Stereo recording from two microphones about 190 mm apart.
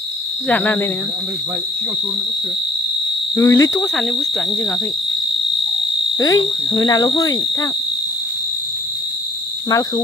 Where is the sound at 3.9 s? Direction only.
5° left (ahead or behind).